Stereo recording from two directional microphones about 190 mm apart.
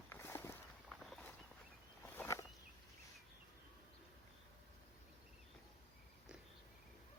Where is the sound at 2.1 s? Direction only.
15° left (ahead or behind).